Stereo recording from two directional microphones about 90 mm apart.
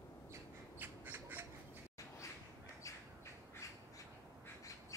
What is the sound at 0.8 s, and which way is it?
Squawk, 20° right (ahead or behind).